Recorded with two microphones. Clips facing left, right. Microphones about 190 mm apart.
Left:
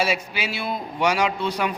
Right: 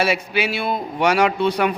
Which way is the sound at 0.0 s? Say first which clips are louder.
Right 4 dB; 60° right (ahead or behind).